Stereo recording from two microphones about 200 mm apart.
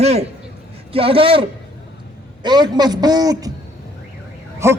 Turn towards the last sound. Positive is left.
turn(degrees=-15)  # may be behind; listen again after turning